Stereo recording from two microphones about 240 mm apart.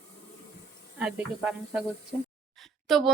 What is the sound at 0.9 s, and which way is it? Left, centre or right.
Speech, centre.